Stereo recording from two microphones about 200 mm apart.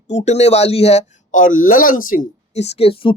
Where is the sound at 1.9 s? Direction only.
90° left.